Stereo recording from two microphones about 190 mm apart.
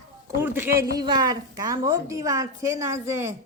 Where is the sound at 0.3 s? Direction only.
10° right (ahead or behind).